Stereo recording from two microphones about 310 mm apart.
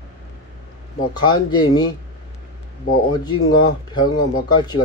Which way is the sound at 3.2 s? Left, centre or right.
Centre.